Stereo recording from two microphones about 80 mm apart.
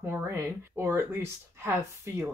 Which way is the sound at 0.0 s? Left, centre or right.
Right.